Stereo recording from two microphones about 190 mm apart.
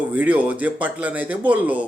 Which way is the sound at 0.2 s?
10° right (ahead or behind).